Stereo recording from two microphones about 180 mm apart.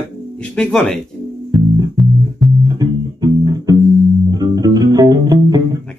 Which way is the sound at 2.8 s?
20° right (ahead or behind).